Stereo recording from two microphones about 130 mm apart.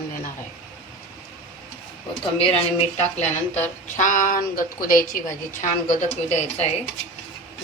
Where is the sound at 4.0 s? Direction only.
90° left; by 6.7 s 60° left (ahead or behind).